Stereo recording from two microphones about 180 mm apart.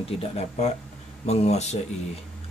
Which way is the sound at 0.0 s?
35° left (ahead or behind).